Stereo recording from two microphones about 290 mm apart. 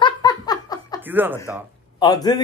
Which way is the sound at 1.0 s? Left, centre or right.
Centre.